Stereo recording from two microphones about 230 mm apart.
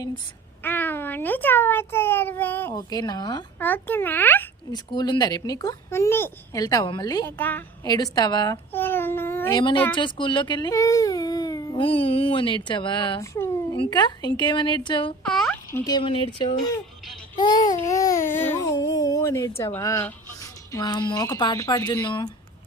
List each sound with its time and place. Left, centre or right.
0.6 s speech: centre
4.9 s speech: centre
15.2 s fowl: centre
15.8 s speech: centre
17.3 s babbling: centre
18.5 s speech: centre